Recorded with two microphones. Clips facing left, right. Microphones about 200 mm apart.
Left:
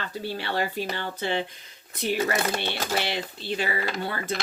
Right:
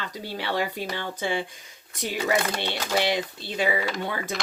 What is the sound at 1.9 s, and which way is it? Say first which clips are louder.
Speech: even; 15° right (ahead or behind).